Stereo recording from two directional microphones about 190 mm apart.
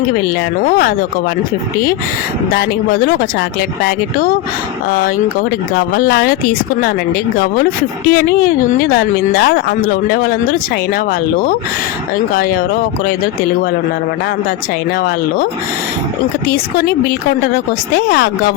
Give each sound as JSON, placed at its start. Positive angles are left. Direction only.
{"t": 0.6, "sound": "speech", "side_deg": 50}
{"t": 2.6, "sound": "speech", "side_deg": 50}
{"t": 8.1, "sound": "speech", "side_deg": 50}
{"t": 16.7, "sound": "speech", "side_deg": 55}